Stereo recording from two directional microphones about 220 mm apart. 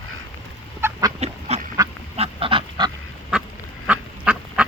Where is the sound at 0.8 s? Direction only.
10° right (ahead or behind).